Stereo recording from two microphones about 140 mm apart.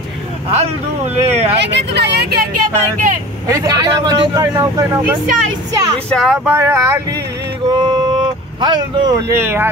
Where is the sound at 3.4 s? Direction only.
25° right (ahead or behind).